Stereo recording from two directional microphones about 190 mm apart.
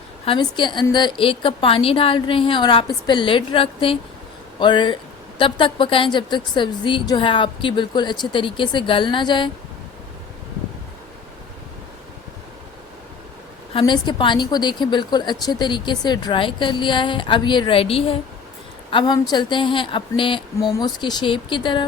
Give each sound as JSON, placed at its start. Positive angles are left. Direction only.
{"t": 0.3, "sound": "a woman's voice", "side_deg": 25}
{"t": 13.7, "sound": "a woman's voice", "side_deg": 25}